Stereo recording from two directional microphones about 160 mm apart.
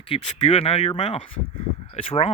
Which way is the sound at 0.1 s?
35° left (ahead or behind).